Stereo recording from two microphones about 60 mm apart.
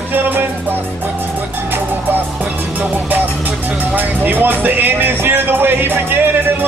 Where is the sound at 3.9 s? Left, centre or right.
Right.